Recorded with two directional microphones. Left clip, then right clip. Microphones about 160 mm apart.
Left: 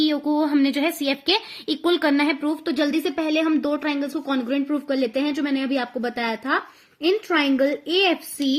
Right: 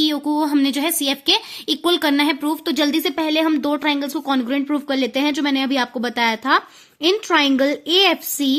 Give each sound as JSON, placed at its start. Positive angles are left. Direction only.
{"t": 0.0, "sound": "a woman's voice", "side_deg": -40}